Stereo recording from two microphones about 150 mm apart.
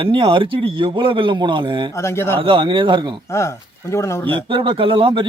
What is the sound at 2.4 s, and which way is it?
Speech, 35° right (ahead or behind).